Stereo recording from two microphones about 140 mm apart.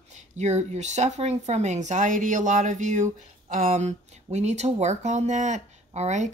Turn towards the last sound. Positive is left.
turn(degrees=-55)  # may be behind; listen again after turning